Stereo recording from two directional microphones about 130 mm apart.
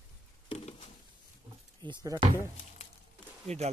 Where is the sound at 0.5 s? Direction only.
50° left (ahead or behind).